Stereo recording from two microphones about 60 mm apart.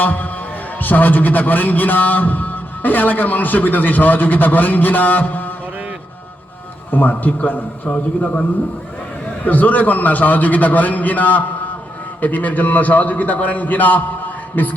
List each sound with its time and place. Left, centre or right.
0.0 s a man's voice: left
6.9 s a man's voice: left